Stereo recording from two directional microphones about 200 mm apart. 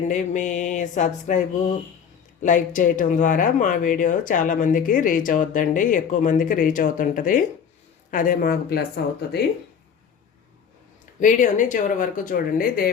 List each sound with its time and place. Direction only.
0.1 s speech: 40° left (ahead or behind)
11.2 s speech: 40° left (ahead or behind)